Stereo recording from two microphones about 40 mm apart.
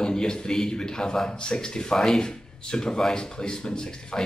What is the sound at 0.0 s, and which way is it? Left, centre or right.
Speech, centre.